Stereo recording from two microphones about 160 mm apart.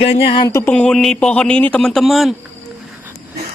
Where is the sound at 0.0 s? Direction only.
35° left (ahead or behind).